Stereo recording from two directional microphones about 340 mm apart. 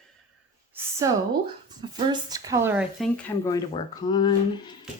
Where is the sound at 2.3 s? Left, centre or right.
Centre.